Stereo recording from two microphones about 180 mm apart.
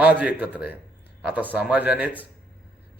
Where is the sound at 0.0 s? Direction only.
10° right (ahead or behind).